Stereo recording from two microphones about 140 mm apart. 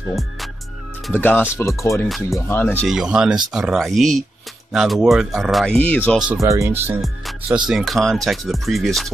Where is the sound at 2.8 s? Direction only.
5° right (ahead or behind); by 6.2 s 10° left (ahead or behind).